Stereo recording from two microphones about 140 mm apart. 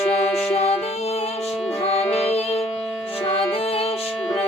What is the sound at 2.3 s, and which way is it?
Music, 45° left (ahead or behind).